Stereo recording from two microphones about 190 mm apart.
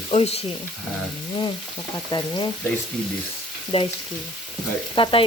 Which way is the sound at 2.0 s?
20° left (ahead or behind).